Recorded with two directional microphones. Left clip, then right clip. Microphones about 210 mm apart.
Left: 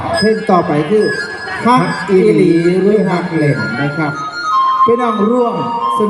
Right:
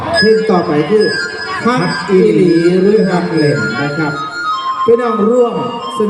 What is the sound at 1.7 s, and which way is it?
Speech, 20° left (ahead or behind).